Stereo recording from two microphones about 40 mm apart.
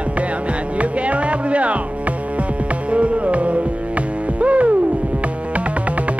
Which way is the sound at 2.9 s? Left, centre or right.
Right.